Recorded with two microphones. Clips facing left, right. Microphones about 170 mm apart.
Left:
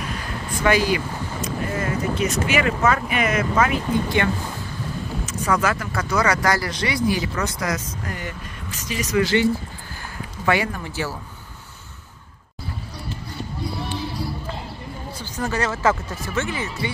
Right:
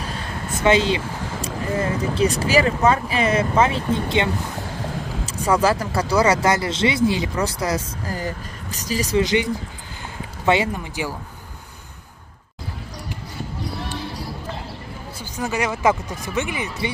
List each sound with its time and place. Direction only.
0.0 s speech: 30° right (ahead or behind)
4.6 s a sound: 80° right
5.2 s speech: 30° right (ahead or behind)
9.2 s speech: 20° right (ahead or behind)
15.1 s speech: 10° right (ahead or behind)